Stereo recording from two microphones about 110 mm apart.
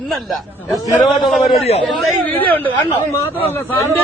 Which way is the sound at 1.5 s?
70° left (ahead or behind).